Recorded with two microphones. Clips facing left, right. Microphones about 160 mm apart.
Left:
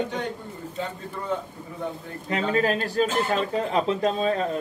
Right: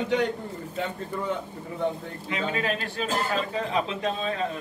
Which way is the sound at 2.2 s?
40° left (ahead or behind).